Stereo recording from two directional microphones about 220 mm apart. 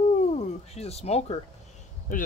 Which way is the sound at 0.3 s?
30° left (ahead or behind).